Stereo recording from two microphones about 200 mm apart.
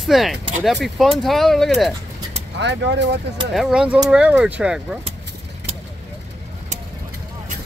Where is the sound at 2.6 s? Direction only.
60° right (ahead or behind).